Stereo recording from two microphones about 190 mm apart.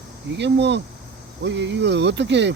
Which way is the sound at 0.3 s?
65° right (ahead or behind).